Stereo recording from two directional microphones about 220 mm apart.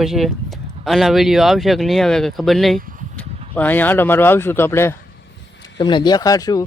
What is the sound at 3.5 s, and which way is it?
Speech, 10° left (ahead or behind).